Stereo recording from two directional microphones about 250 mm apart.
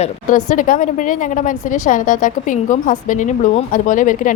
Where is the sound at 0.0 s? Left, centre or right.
Left.